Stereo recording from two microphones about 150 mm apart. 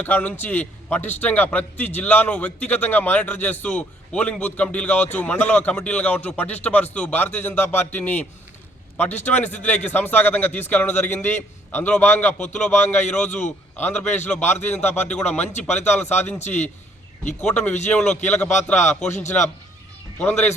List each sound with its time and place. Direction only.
0.0 s a man's voice: 10° left (ahead or behind)
16.4 s speech: 50° left (ahead or behind)
17.4 s a man's voice: 10° left (ahead or behind)
18.8 s speech: 50° left (ahead or behind)
20.1 s a man's voice: 10° left (ahead or behind)